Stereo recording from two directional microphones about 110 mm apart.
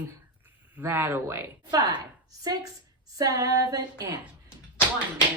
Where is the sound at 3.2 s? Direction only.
35° right (ahead or behind).